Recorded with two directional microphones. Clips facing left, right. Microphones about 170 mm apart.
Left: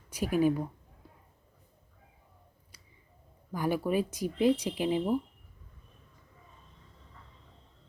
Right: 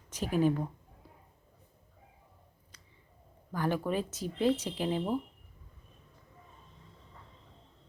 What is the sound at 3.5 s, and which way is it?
Speech, 10° left (ahead or behind).